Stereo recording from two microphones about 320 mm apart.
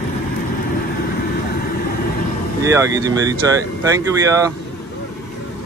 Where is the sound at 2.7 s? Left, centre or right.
Centre.